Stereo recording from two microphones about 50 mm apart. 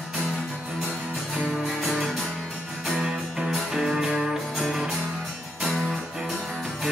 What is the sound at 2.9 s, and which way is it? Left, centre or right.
Music, centre.